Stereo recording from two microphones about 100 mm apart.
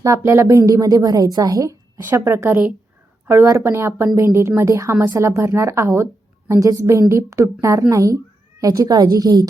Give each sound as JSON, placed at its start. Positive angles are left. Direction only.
{"t": 0.0, "sound": "a woman's voice", "side_deg": -30}